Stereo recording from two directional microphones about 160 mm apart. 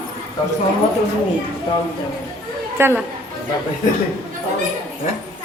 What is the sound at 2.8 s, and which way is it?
Speech, 15° right (ahead or behind).